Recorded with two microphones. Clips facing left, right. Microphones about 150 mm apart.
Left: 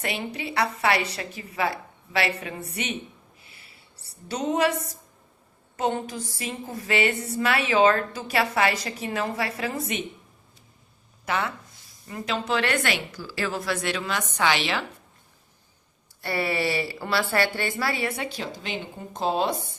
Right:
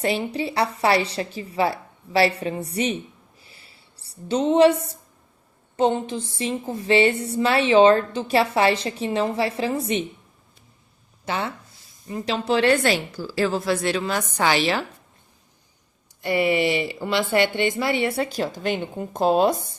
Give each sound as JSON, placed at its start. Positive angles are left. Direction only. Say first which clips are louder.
{"t": 0.3, "sound": "a woman's voice", "louder": "right 3 dB", "side_deg": -30}
{"t": 3.4, "sound": "a sound", "louder": "right 1 dB", "side_deg": -30}
{"t": 4.3, "sound": "a woman's voice", "louder": "right 8 dB", "side_deg": -30}
{"t": 11.3, "sound": "a woman's voice", "louder": "right 1 dB", "side_deg": -30}
{"t": 16.2, "sound": "a woman's voice", "louder": "right 6 dB", "side_deg": -15}
{"t": 18.2, "sound": "speech", "louder": "right 8 dB", "side_deg": -45}